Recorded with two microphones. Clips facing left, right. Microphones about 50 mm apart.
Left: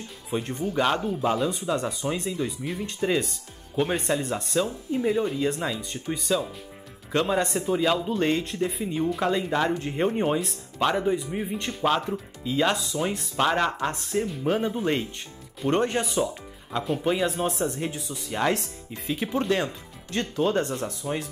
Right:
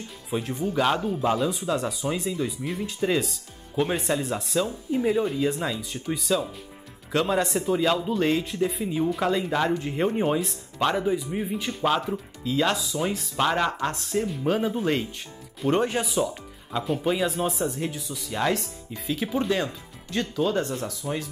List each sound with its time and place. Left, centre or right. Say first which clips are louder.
0.3 s speech: right 1 dB; centre
12.4 s speech: even; centre
12.9 s speech: even; centre
18.3 s speech: even; centre
19.2 s speech: even; centre
20.2 s speech: even; left
20.8 s speech: left 1 dB; left